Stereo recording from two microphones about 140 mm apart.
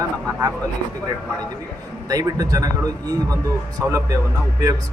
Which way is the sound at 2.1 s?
25° right (ahead or behind).